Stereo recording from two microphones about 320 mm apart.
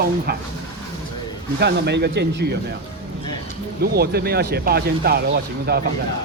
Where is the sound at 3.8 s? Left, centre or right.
Right.